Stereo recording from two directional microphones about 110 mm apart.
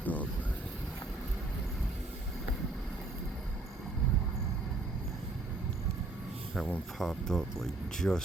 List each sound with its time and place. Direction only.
0.0 s vehicle: 15° left (ahead or behind)
6.6 s speech: 5° left (ahead or behind)